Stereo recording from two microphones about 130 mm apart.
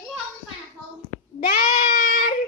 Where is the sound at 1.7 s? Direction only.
90° left.